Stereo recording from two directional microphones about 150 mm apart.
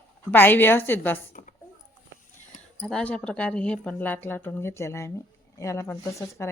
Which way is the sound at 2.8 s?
5° left (ahead or behind).